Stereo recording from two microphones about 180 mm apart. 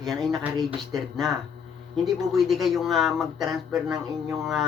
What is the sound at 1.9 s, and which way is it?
Speech, centre (ahead or behind).